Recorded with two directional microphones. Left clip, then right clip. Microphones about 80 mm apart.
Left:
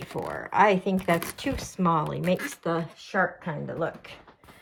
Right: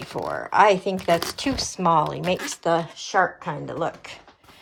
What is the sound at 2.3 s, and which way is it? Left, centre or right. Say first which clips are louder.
Speech: right 6 dB; right.